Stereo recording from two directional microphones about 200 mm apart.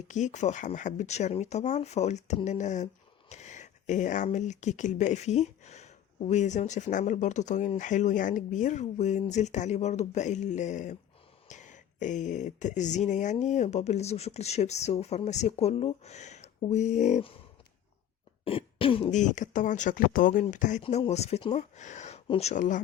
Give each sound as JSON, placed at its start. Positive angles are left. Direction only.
{"t": 0.1, "sound": "speech", "side_deg": 35}
{"t": 18.4, "sound": "speech", "side_deg": 25}